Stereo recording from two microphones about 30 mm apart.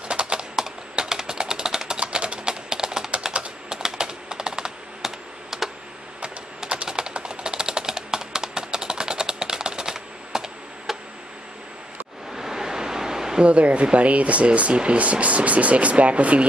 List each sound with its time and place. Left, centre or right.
0.1 s typing: right
0.6 s typing: centre
2.0 s typing: right
3.3 s typing: right
3.7 s typing: right
5.0 s a sound: centre
6.9 s a sound: right
12.3 s a sound: centre
13.4 s speech: right